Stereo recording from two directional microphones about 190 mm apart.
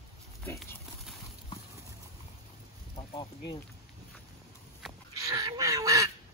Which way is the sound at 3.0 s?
30° left (ahead or behind).